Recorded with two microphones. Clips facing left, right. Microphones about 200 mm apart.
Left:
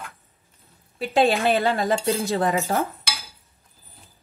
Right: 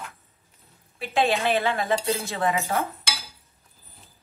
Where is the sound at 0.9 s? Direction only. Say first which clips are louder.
Left 4 dB; 35° left (ahead or behind).